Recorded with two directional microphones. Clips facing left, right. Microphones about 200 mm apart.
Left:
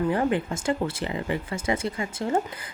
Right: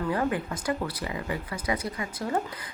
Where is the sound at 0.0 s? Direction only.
25° left (ahead or behind).